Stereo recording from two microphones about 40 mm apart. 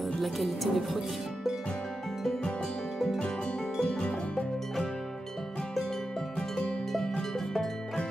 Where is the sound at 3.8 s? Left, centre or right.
Left.